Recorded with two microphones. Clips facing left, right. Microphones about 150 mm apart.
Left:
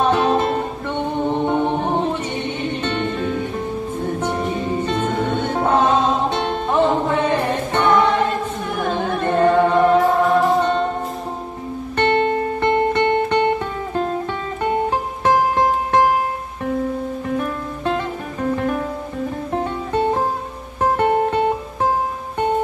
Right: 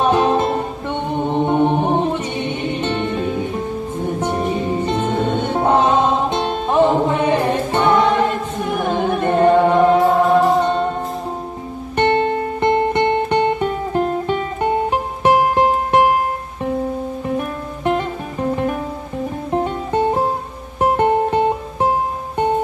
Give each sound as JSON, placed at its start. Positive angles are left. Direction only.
{"t": 0.0, "sound": "music", "side_deg": -10}
{"t": 8.8, "sound": "singing", "side_deg": -15}
{"t": 12.0, "sound": "music", "side_deg": -15}
{"t": 17.4, "sound": "music", "side_deg": -15}
{"t": 19.6, "sound": "music", "side_deg": -15}